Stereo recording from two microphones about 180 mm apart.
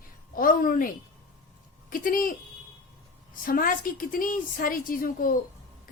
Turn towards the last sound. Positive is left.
turn(degrees=50)  # may be behind; listen again after turning